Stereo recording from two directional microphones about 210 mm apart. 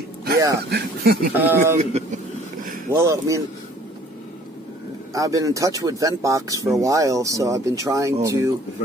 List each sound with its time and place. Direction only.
0.7 s speech: 50° right (ahead or behind)
1.3 s speech: 10° right (ahead or behind)
1.8 s a man's voice: 30° right (ahead or behind)
2.9 s speech: 15° right (ahead or behind)
5.1 s speech: 15° right (ahead or behind)